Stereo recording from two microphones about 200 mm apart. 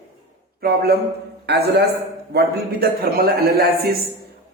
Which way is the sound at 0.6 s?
50° right (ahead or behind).